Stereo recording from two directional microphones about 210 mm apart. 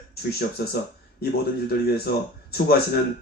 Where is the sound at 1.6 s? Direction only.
50° left (ahead or behind).